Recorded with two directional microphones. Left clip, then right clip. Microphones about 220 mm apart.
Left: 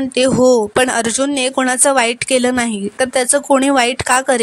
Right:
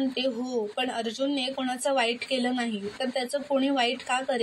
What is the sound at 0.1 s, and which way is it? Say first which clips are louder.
A woman's voice: left 18 dB; 55° left (ahead or behind).